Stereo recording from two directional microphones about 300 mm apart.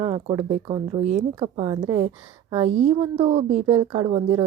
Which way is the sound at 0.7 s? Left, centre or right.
Right.